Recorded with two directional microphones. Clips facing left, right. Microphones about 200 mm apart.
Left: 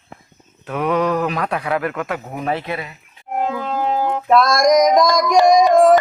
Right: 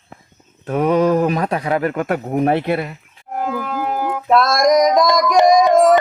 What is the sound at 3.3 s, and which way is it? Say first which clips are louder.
Music: left 1 dB; 25° left (ahead or behind).